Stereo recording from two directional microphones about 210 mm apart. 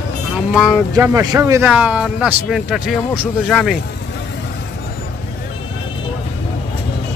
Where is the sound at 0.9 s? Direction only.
15° right (ahead or behind); by 3.7 s centre (ahead or behind).